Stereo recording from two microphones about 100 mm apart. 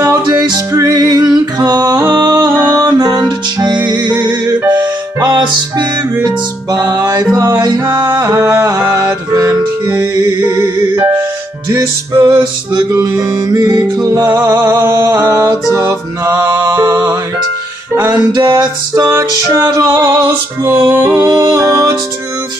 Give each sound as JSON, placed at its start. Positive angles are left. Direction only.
{"t": 0.3, "sound": "music", "side_deg": -45}
{"t": 2.0, "sound": "music", "side_deg": -30}
{"t": 10.6, "sound": "music", "side_deg": -20}
{"t": 12.2, "sound": "music", "side_deg": -45}
{"t": 14.2, "sound": "music", "side_deg": -20}
{"t": 18.3, "sound": "music", "side_deg": -50}
{"t": 18.9, "sound": "music", "side_deg": -30}
{"t": 21.2, "sound": "music", "side_deg": -40}